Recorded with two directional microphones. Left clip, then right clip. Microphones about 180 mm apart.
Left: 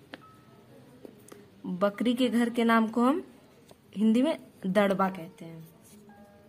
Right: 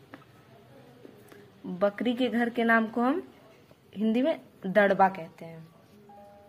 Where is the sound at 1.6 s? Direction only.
20° left (ahead or behind).